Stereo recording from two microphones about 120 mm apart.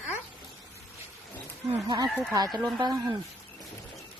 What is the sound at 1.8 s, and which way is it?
Speech, 35° right (ahead or behind).